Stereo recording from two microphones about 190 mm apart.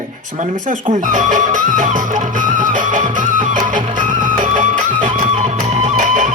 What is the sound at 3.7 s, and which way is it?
Music, 45° right (ahead or behind).